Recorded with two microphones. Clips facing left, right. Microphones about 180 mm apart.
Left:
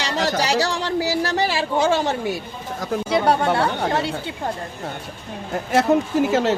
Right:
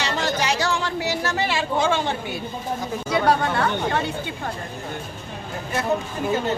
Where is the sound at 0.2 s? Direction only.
35° left (ahead or behind).